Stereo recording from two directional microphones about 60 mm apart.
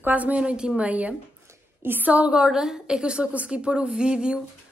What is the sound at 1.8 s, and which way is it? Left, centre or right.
Speech, right.